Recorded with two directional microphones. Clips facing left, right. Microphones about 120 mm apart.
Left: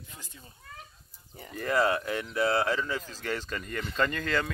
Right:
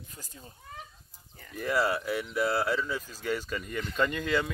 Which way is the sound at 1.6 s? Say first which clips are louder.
Left 2 dB; 5° right (ahead or behind).